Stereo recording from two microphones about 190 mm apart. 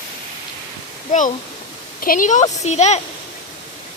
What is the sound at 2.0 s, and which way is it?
Speech, 45° left (ahead or behind).